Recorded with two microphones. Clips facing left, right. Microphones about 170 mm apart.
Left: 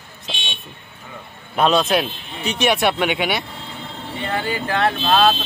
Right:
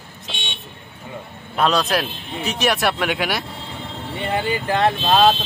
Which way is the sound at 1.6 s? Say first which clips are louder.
Left 2 dB; centre (ahead or behind).